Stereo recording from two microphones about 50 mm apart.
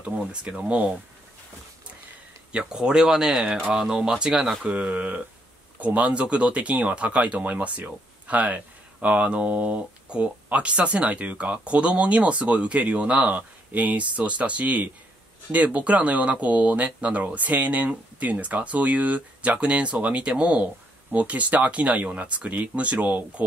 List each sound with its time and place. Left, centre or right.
0.0 s speech: centre
2.5 s speech: centre
4.6 s speech: right